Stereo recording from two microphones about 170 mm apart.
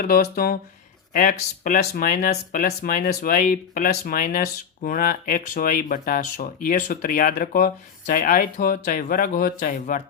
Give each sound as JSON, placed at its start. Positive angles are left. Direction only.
{"t": 0.0, "sound": "speech", "side_deg": 60}